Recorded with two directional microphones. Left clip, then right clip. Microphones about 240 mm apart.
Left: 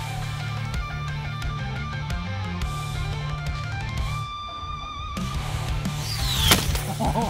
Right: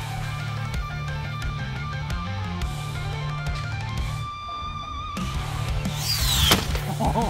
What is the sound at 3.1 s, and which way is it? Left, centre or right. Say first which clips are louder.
Music: right 1 dB; centre.